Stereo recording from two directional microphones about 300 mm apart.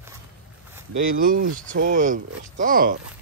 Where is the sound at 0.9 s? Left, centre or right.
Right.